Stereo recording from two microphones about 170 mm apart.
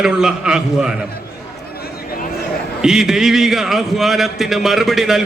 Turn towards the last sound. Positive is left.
turn(degrees=0)  # may be behind; listen again after turning